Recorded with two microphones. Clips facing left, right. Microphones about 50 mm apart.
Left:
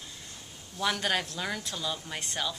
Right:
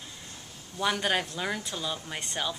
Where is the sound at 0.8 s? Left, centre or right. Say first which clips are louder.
Right 2 dB; centre.